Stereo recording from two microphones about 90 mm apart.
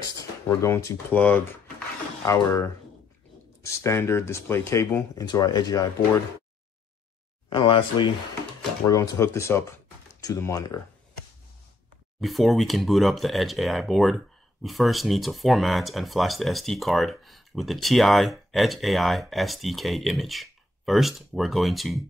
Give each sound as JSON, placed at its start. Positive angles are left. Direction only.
{"t": 0.5, "sound": "speech", "side_deg": 30}
{"t": 1.1, "sound": "speech", "side_deg": 15}
{"t": 2.2, "sound": "speech", "side_deg": 35}
{"t": 5.1, "sound": "speech", "side_deg": 45}
{"t": 7.4, "sound": "speech", "side_deg": 65}
{"t": 8.8, "sound": "speech", "side_deg": 40}
{"t": 12.2, "sound": "speech", "side_deg": 0}